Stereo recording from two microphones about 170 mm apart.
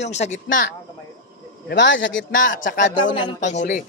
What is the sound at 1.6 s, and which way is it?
Speech, 90° left.